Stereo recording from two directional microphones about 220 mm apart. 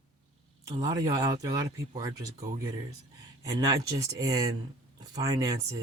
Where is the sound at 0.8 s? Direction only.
15° right (ahead or behind).